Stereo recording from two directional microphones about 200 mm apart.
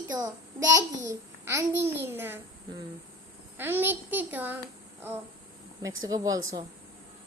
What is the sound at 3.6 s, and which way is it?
A child's voice, 10° right (ahead or behind).